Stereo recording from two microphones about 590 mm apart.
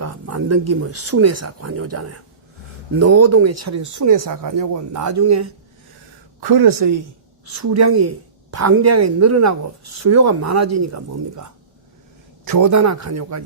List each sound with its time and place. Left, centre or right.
0.0 s a woman's voice: right